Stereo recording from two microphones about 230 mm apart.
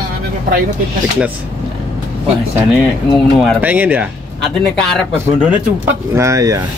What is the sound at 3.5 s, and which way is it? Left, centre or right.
Speech, centre.